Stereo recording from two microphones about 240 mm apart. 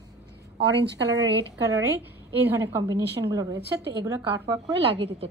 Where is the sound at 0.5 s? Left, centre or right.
Right.